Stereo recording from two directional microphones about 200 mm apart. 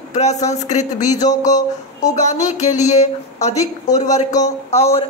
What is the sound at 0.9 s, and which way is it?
Speech, 20° left (ahead or behind).